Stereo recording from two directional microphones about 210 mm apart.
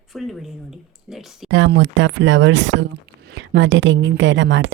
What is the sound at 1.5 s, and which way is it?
A woman's voice, 60° right (ahead or behind).